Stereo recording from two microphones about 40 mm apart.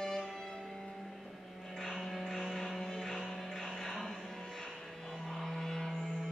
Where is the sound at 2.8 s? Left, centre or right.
Centre.